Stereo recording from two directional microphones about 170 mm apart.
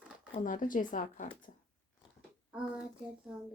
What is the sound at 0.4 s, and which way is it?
Speech, 50° left (ahead or behind).